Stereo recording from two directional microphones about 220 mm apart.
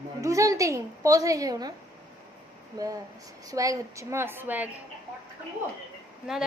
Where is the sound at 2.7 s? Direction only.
15° right (ahead or behind).